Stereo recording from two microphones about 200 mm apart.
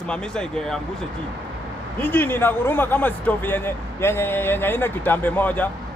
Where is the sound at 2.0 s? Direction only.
10° left (ahead or behind).